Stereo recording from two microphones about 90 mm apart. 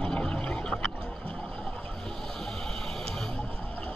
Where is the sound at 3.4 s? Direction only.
20° left (ahead or behind).